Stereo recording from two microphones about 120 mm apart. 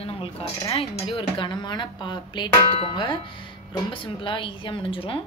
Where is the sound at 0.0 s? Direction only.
50° left (ahead or behind).